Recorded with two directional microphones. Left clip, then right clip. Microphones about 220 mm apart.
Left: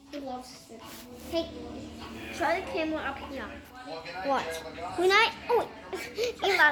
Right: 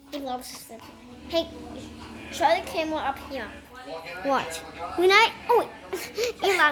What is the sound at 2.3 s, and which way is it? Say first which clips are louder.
A woman's voice: right 6 dB; 10° right (ahead or behind).